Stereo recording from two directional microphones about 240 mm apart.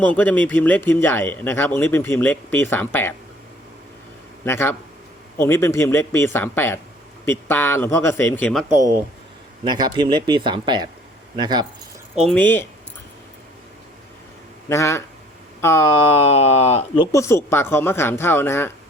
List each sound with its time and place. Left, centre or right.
0.0 s speech: centre
4.4 s speech: centre
9.6 s speech: centre
12.3 s speech: centre
14.7 s speech: centre
16.2 s speech: left; by 18.7 s centre